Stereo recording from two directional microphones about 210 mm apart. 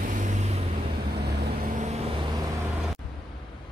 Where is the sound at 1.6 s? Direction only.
35° right (ahead or behind).